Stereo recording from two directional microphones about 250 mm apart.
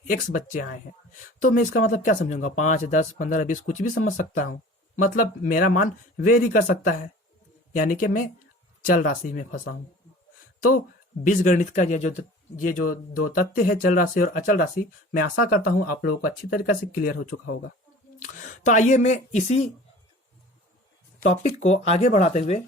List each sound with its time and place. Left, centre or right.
0.1 s speech: left
9.3 s speech: left
11.2 s speech: left
17.3 s speech: left
18.2 s speech: left
21.2 s speech: left